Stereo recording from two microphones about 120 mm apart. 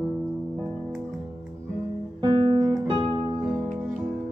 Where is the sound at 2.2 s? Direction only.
40° right (ahead or behind).